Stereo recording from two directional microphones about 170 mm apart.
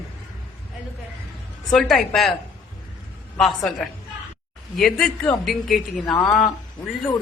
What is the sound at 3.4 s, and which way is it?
Speech, centre (ahead or behind).